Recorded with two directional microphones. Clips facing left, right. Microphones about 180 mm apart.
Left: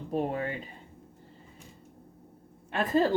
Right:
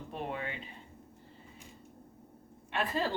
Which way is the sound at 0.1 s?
40° left (ahead or behind).